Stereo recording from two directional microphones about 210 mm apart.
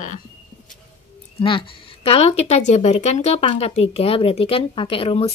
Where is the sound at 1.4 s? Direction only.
25° left (ahead or behind).